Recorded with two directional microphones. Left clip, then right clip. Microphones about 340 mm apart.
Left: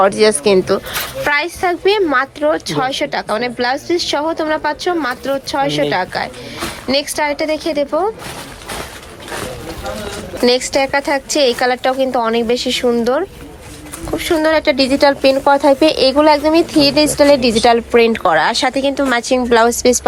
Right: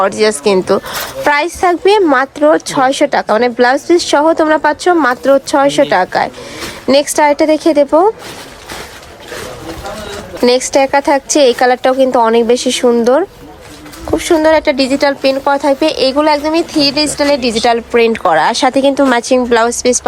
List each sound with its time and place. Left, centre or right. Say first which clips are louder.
0.0 s a woman's voice: even; centre
10.4 s speech: right 4 dB; centre